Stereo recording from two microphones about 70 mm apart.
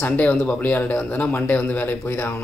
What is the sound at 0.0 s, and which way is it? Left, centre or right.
Speech, left.